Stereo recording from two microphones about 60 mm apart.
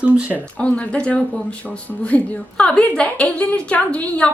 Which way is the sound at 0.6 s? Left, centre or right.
Left.